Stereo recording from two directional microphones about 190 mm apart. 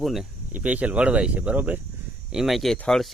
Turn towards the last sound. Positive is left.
turn(degrees=0)  # may be behind; listen again after turning